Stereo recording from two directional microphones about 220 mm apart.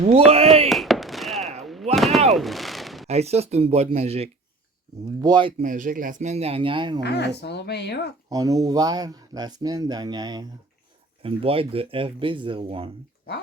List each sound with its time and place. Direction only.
0.3 s a sound: 25° right (ahead or behind)
0.7 s fireworks: centre (ahead or behind)
1.6 s a sound: centre (ahead or behind)
3.1 s speech: 30° right (ahead or behind)
5.6 s speech: 40° right (ahead or behind); by 7.0 s 20° right (ahead or behind)
7.0 s speech: 50° left (ahead or behind)
8.3 s speech: 15° right (ahead or behind)